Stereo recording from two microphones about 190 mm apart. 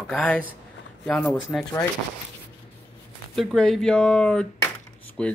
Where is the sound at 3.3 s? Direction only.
Centre (ahead or behind).